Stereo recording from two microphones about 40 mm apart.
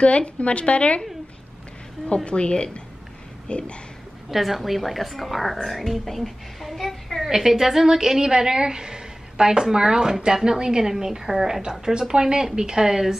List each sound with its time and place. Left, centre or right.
0.0 s a woman's voice: left
2.2 s speech: left
4.3 s a woman's voice: centre
7.2 s a woman's voice: centre